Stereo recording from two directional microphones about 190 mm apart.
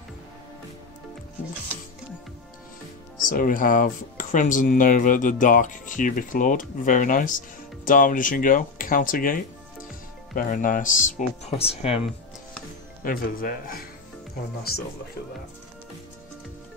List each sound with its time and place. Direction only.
3.3 s speech: 45° left (ahead or behind)
13.0 s speech: 50° left (ahead or behind)